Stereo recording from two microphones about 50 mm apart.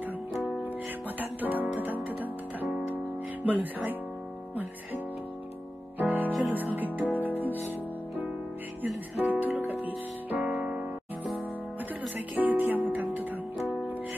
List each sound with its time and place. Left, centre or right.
0.7 s music: right
3.4 s music: right
5.9 s music: right
8.8 s music: right
10.5 s music: right
12.4 s music: right